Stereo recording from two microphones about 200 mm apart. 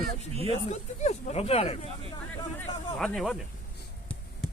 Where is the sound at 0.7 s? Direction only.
35° left (ahead or behind).